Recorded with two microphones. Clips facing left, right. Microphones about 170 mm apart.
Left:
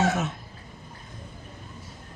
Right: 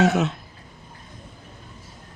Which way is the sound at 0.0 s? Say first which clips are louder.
Right 5 dB; 70° right (ahead or behind).